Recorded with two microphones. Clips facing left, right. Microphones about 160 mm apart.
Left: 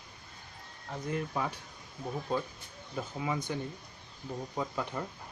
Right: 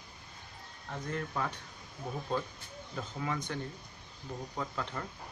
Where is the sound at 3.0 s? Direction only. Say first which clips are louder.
Left 2 dB; 10° left (ahead or behind).